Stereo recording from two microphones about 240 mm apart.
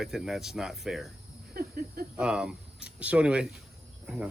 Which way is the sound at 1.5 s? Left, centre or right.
Right.